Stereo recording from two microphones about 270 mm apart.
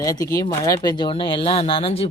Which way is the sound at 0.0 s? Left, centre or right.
Centre.